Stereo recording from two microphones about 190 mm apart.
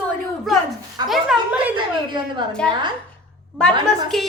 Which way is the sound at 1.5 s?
10° right (ahead or behind).